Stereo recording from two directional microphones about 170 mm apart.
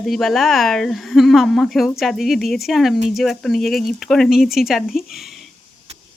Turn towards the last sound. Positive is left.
turn(degrees=0)  # may be behind; listen again after turning